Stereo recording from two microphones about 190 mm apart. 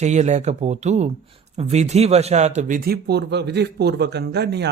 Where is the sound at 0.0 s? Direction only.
35° right (ahead or behind).